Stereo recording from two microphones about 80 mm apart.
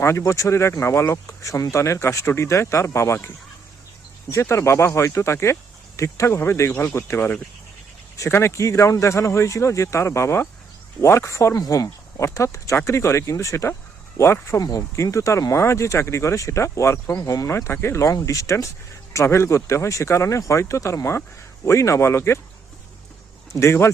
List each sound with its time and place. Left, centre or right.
0.0 s speech: left
4.3 s speech: left
8.3 s speech: left
14.6 s speech: left
23.6 s speech: left